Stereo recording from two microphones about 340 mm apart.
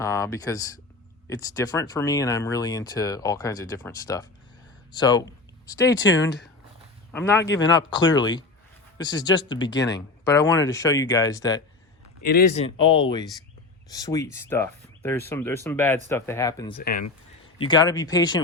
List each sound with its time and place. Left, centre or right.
0.0 s speech: centre
6.0 s speech: left
7.1 s speech: centre
12.2 s speech: left; by 16.7 s centre
16.7 s speech: left
17.6 s speech: centre